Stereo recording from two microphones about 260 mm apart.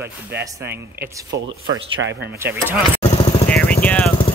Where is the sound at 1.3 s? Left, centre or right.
Right.